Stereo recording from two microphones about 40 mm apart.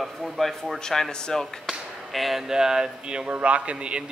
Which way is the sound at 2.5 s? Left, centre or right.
Centre.